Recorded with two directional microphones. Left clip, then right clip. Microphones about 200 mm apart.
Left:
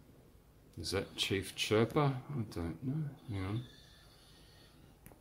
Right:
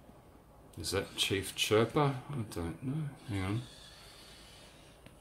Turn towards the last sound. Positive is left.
turn(degrees=-15)  # may be behind; listen again after turning